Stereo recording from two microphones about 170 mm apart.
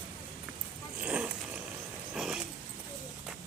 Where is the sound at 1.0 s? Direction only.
5° right (ahead or behind).